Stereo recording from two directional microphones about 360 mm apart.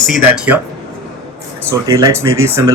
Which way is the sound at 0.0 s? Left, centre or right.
Centre.